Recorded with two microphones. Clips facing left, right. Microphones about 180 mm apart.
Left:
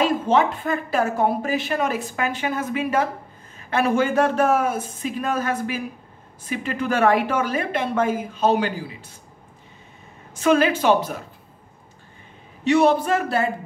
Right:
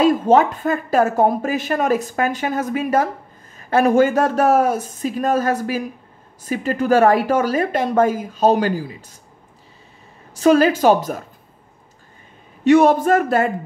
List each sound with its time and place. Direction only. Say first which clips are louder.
0.0 s a woman's voice: right 5 dB; 40° right (ahead or behind)
10.3 s a woman's voice: right 4 dB; 35° right (ahead or behind)
12.6 s a woman's voice: right 5 dB; 45° right (ahead or behind)